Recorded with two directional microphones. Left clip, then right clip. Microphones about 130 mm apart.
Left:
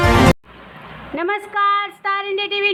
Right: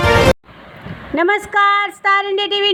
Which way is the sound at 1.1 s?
50° right (ahead or behind).